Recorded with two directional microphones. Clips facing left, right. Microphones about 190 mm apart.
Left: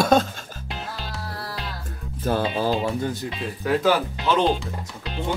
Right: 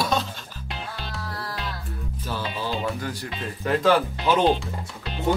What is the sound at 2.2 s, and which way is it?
Music, 50° left (ahead or behind).